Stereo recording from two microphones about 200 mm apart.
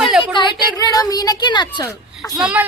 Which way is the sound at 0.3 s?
20° left (ahead or behind).